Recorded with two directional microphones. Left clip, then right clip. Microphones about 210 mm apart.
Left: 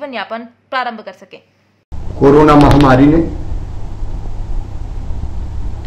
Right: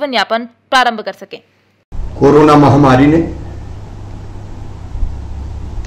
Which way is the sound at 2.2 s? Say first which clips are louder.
Even; 15° right (ahead or behind).